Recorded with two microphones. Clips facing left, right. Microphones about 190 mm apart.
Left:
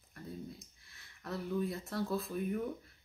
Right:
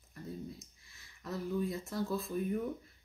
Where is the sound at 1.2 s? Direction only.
Centre (ahead or behind).